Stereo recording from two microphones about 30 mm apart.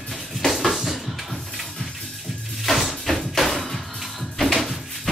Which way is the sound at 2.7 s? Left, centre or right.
Left.